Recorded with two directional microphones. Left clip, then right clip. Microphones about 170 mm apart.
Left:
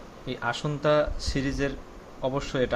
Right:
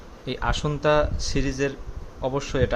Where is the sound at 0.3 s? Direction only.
25° right (ahead or behind).